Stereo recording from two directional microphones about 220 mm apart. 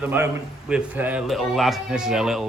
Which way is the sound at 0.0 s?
10° right (ahead or behind).